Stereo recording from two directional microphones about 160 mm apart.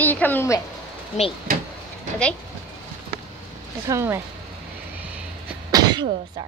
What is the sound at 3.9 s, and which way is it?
Speech, 15° right (ahead or behind).